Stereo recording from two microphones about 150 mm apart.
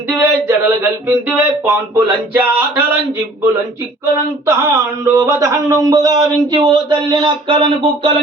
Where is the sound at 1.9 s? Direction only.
20° right (ahead or behind).